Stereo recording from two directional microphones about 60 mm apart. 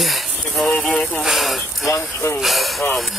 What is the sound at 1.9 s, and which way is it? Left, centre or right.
Speech, left.